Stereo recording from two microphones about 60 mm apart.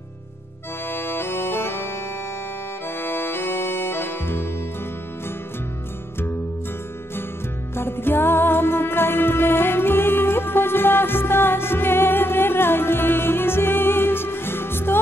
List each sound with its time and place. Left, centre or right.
0.8 s accordion: left
3.0 s music: left
7.7 s music: left